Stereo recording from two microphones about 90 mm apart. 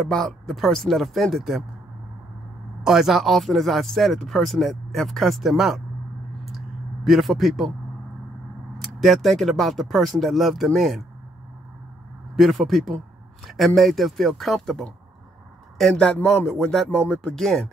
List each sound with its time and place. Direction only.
0.1 s speech: 5° left (ahead or behind)
2.8 s speech: 5° right (ahead or behind)
7.1 s speech: centre (ahead or behind)
9.0 s speech: centre (ahead or behind)
12.4 s speech: centre (ahead or behind)